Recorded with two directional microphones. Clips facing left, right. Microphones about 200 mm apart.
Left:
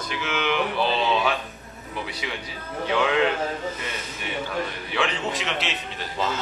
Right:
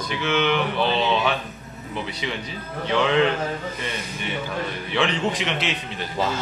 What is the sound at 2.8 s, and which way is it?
Speech, 5° left (ahead or behind).